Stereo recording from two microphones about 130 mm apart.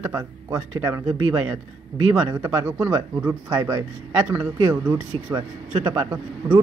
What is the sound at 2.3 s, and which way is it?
Speech, 15° right (ahead or behind).